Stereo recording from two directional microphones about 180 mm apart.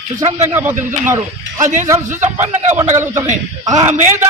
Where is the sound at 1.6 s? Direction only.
45° right (ahead or behind).